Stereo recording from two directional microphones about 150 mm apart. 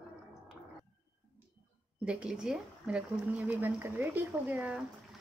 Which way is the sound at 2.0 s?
5° right (ahead or behind).